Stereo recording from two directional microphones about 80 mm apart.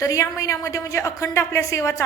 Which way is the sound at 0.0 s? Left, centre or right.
Left.